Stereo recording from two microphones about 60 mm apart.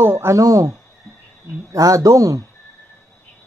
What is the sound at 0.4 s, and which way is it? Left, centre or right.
Speech, right.